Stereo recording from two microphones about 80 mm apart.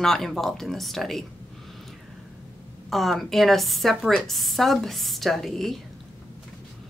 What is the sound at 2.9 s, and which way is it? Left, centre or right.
Speech, centre.